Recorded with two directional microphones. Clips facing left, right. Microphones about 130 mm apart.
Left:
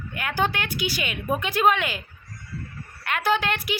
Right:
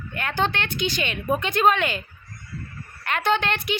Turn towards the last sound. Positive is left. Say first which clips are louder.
# right 1 dB
turn(degrees=5)  # may be behind; listen again after turning